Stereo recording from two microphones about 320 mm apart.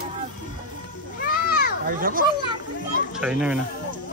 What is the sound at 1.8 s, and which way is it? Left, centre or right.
Speech, right.